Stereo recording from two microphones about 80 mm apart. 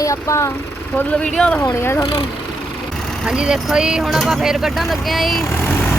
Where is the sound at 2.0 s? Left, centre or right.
Left.